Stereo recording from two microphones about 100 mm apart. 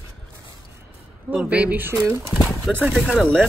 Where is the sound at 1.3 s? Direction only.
15° right (ahead or behind).